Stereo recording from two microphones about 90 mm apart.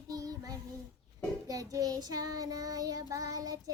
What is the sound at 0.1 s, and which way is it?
Child singing, 45° right (ahead or behind).